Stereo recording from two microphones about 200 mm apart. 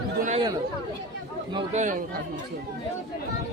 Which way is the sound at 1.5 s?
35° right (ahead or behind).